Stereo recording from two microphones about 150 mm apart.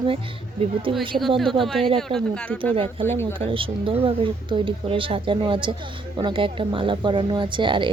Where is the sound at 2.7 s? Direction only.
40° right (ahead or behind).